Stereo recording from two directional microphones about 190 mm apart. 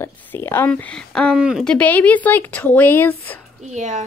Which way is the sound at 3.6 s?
40° right (ahead or behind).